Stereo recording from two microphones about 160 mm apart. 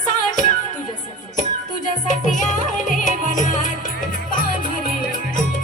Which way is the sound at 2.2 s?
50° left (ahead or behind).